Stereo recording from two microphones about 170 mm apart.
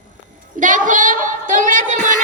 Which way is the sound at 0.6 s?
50° right (ahead or behind).